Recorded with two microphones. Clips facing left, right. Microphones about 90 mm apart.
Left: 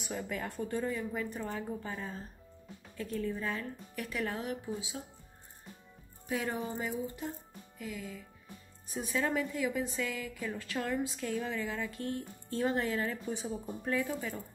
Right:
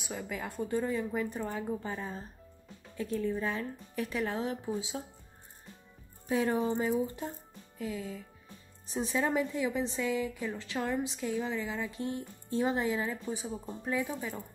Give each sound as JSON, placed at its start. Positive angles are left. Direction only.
{"t": 0.1, "sound": "speech", "side_deg": -10}
{"t": 6.2, "sound": "speech", "side_deg": -25}
{"t": 7.8, "sound": "speech", "side_deg": -25}
{"t": 13.3, "sound": "speech", "side_deg": -5}